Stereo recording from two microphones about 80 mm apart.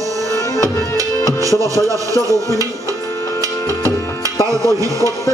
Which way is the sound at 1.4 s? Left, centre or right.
Right.